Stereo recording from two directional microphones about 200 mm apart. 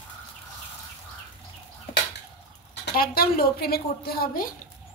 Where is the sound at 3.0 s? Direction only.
50° left (ahead or behind).